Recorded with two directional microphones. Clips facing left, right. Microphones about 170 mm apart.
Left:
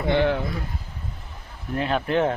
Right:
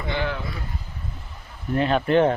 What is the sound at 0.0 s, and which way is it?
Speech, 55° left (ahead or behind).